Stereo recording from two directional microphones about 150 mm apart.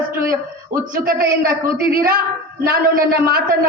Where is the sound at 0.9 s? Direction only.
75° right (ahead or behind).